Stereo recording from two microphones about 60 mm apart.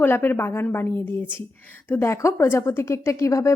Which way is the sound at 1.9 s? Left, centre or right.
Left.